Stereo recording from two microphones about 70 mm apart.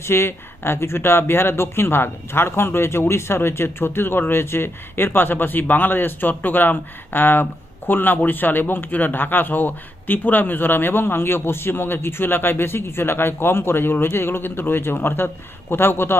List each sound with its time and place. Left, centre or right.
0.0 s speech: left